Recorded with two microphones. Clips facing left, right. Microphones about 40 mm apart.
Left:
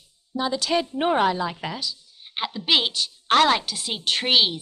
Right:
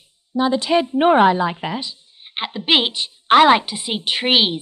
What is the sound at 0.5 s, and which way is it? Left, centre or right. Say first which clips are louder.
A woman's voice: right 6 dB; right.